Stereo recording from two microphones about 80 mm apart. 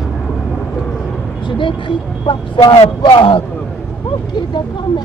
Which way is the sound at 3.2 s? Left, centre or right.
Left.